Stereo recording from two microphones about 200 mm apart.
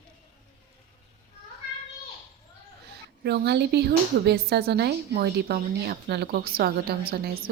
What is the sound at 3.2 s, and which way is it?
Speech, 55° right (ahead or behind).